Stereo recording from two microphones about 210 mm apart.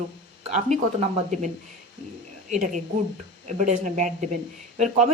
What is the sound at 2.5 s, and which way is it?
Speech, 35° right (ahead or behind).